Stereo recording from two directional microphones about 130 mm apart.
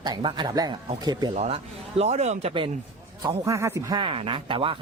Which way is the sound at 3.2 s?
20° right (ahead or behind).